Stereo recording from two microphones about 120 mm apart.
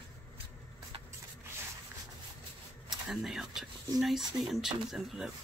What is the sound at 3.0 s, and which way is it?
Speech, centre (ahead or behind).